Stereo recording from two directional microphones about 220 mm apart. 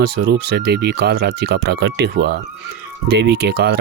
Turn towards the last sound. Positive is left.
turn(degrees=-50)  # may be behind; listen again after turning